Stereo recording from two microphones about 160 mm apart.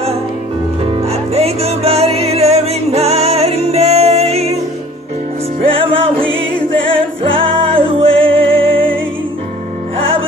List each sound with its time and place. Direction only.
0.8 s music: 40° right (ahead or behind)
5.6 s music: 35° right (ahead or behind)
7.3 s music: 35° right (ahead or behind)